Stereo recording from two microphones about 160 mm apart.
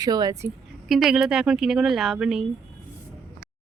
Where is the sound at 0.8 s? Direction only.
Centre (ahead or behind).